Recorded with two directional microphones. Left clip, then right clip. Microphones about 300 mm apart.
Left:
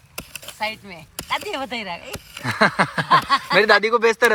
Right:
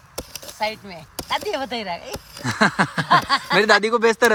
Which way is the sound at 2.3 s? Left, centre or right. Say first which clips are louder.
Left 1 dB; centre.